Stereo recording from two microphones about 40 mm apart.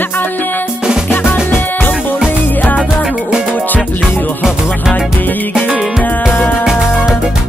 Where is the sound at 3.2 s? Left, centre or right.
Right.